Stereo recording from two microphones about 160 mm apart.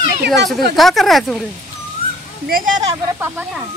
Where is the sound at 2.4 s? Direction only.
65° right (ahead or behind).